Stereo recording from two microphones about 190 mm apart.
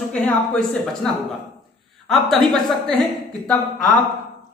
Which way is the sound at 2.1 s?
Centre (ahead or behind).